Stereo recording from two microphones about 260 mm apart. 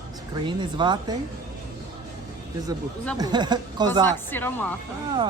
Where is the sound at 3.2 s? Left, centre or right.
Centre.